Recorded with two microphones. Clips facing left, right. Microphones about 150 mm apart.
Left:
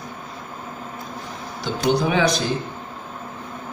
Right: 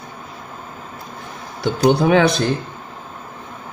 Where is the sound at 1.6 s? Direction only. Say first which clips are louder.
Right 5 dB; 60° right (ahead or behind).